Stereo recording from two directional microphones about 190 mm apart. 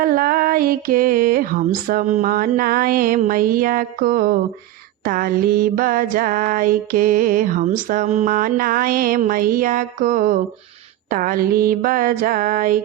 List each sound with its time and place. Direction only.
0.0 s mantra: 50° right (ahead or behind)